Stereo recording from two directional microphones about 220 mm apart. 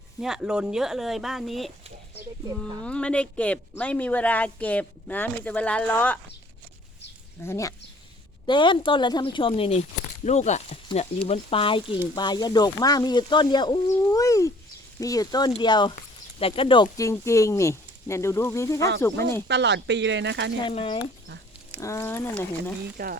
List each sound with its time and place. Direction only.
0.2 s speech: centre (ahead or behind)
2.8 s speech: 5° left (ahead or behind)
7.4 s a woman's voice: 15° left (ahead or behind)
19.5 s speech: 50° right (ahead or behind)
20.7 s a woman's voice: 25° left (ahead or behind)
23.0 s speech: 45° right (ahead or behind)